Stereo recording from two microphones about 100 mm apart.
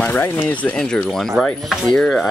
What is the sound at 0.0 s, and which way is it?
Speech, 20° left (ahead or behind).